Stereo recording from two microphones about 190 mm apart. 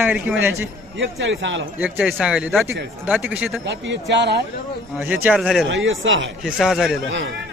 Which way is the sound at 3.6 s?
70° right (ahead or behind).